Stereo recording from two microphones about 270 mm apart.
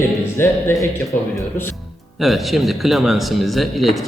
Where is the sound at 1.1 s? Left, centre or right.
Left.